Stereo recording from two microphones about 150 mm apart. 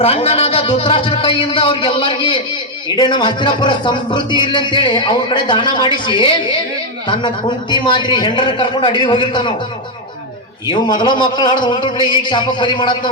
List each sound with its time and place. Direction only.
0.0 s speech: 40° left (ahead or behind)
10.7 s speech: 30° left (ahead or behind)